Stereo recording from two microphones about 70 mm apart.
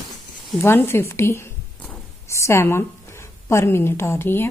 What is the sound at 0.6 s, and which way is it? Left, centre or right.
A woman's voice, left.